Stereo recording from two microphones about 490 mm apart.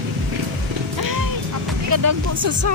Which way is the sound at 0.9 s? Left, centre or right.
Right.